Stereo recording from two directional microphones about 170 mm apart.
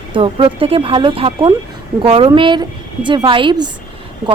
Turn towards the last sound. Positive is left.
turn(degrees=-25)  # may be behind; listen again after turning